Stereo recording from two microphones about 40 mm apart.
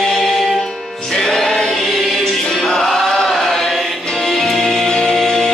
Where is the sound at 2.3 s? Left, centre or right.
Centre.